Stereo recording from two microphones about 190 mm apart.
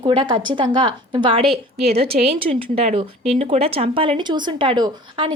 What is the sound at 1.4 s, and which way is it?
Speech, centre (ahead or behind).